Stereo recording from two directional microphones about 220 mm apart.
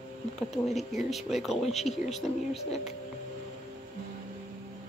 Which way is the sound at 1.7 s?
30° left (ahead or behind).